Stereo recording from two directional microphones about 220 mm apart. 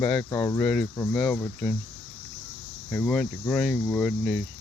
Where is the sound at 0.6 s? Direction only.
5° left (ahead or behind).